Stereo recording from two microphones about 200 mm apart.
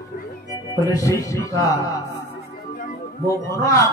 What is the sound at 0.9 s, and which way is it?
Music, 15° left (ahead or behind).